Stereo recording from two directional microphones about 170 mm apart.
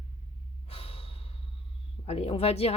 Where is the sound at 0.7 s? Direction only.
35° left (ahead or behind).